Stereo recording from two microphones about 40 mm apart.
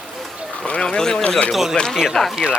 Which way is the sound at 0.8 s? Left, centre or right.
Centre.